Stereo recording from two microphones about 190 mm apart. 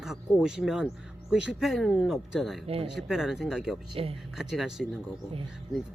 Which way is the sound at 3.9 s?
30° right (ahead or behind).